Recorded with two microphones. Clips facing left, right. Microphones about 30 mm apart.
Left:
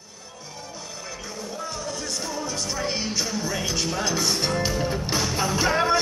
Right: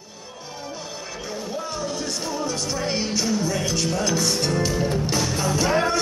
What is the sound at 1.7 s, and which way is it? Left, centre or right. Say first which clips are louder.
Music: right 3 dB; centre.